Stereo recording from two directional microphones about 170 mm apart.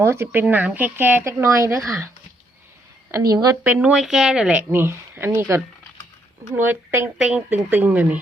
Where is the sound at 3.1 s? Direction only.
20° right (ahead or behind).